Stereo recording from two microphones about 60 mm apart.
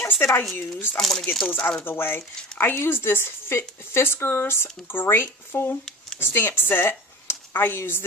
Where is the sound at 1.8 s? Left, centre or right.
Left.